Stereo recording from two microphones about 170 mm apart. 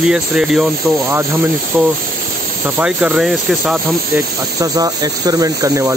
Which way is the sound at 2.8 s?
5° right (ahead or behind).